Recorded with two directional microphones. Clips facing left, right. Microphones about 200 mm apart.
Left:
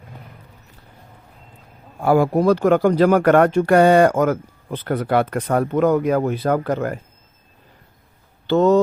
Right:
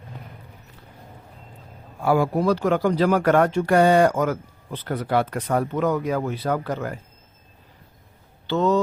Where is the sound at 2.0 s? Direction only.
45° left (ahead or behind).